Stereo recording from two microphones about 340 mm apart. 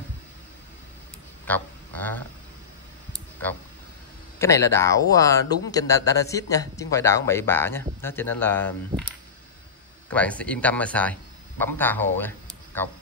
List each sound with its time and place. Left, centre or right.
1.5 s speech: centre
4.4 s speech: centre
10.1 s speech: centre